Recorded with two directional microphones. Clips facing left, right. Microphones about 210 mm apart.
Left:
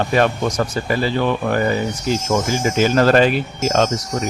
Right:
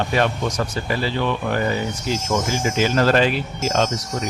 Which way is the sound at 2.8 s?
50° left (ahead or behind).